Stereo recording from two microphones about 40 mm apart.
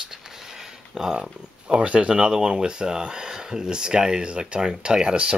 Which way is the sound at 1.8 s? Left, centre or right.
Right.